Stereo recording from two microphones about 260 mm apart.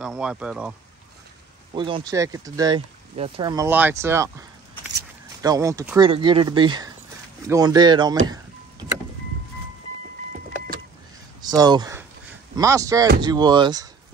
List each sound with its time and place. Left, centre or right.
0.0 s speech: centre
1.7 s speech: centre
11.4 s speech: centre